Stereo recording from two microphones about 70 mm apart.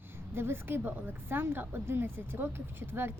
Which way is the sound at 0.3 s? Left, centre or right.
Right.